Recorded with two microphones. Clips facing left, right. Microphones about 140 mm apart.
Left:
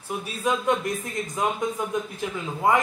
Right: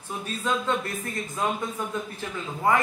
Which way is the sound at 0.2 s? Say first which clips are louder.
Left 1 dB; 10° left (ahead or behind).